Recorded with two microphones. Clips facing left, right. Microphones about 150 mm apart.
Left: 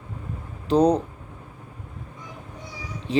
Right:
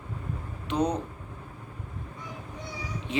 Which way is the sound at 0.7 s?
35° left (ahead or behind).